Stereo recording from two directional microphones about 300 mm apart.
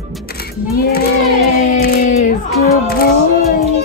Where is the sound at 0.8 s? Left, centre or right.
Left.